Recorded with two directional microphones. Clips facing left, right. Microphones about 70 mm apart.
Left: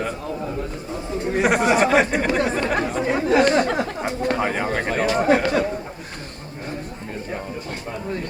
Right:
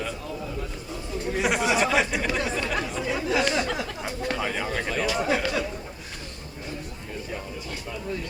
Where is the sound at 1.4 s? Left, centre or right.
Left.